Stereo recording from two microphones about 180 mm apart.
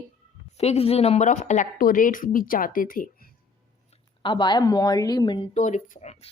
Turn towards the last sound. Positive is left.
turn(degrees=35)  # may be behind; listen again after turning